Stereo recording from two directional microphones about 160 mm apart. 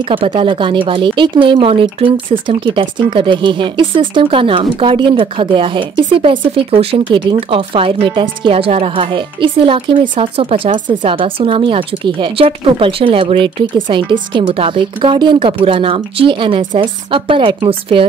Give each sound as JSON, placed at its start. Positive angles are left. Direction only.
{"t": 0.1, "sound": "speech", "side_deg": -35}